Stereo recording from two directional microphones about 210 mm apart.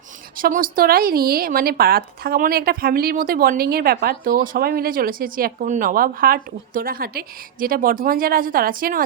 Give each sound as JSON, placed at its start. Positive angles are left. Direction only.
{"t": 0.3, "sound": "speech", "side_deg": -40}